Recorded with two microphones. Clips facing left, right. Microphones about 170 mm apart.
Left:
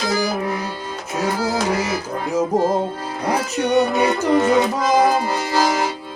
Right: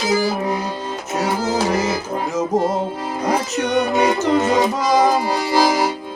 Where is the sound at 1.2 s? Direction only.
10° right (ahead or behind).